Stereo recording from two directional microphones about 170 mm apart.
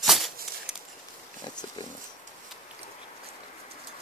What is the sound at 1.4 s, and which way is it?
Pig, 25° left (ahead or behind).